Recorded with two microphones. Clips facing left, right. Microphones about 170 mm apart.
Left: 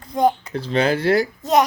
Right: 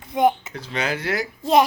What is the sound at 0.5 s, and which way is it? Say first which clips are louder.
Speech: left 7 dB; 30° left (ahead or behind).